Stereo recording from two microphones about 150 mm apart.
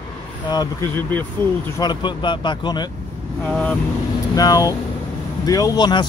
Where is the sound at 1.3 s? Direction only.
15° left (ahead or behind).